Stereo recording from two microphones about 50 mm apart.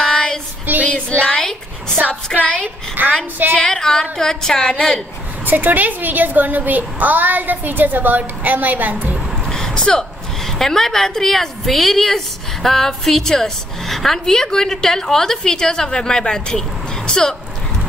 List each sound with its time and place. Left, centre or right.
0.0 s female singing: centre
1.2 s a sound: centre
2.3 s speech: left
3.0 s a woman's voice: right
3.6 s a woman's voice: centre
5.4 s a woman's voice: right
9.5 s a woman's voice: centre